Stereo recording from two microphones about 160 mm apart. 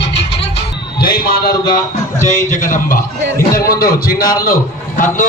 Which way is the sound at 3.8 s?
70° left (ahead or behind).